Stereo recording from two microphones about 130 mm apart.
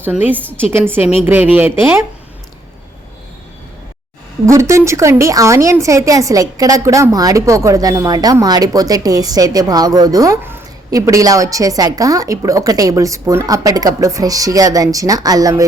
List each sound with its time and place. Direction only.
0.0 s speech: 15° right (ahead or behind)
4.4 s a woman's voice: 20° right (ahead or behind)